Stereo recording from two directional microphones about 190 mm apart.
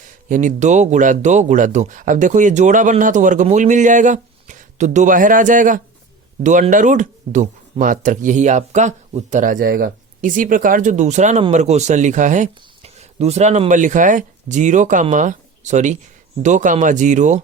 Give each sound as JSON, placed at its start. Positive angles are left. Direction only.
{"t": 0.3, "sound": "speech", "side_deg": -40}